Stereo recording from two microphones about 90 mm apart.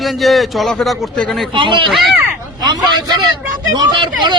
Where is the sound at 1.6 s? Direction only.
70° right (ahead or behind).